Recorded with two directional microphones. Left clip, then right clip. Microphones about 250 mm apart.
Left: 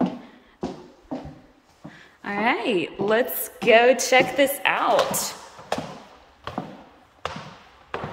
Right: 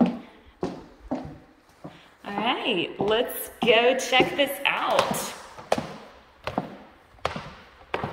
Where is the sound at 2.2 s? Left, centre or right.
Centre.